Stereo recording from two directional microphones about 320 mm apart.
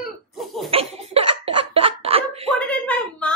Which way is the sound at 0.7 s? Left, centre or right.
Centre.